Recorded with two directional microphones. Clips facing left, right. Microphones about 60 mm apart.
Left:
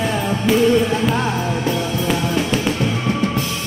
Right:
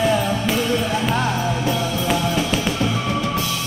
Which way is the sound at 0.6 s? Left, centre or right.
Centre.